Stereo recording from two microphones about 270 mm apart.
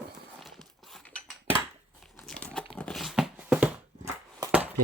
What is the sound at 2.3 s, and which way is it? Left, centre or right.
Crumpling, centre.